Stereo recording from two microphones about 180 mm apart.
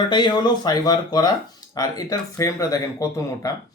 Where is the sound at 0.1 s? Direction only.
25° left (ahead or behind).